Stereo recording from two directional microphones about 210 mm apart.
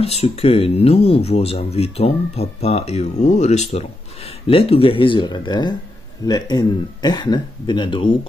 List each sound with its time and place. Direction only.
0.0 s speech: 30° left (ahead or behind)